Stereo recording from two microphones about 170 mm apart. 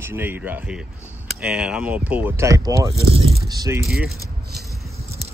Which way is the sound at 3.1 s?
35° right (ahead or behind).